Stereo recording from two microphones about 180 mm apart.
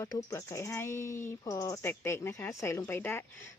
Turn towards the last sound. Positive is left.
turn(degrees=10)  # may be behind; listen again after turning